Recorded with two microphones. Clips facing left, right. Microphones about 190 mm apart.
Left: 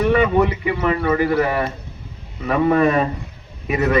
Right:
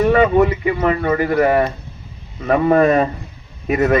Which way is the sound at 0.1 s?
45° right (ahead or behind).